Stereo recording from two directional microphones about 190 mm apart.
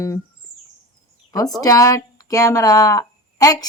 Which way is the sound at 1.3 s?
20° left (ahead or behind).